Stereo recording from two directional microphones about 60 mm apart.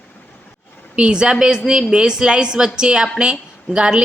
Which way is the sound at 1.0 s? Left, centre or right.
Centre.